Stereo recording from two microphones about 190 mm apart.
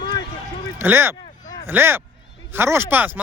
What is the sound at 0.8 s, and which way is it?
Speech, 10° right (ahead or behind).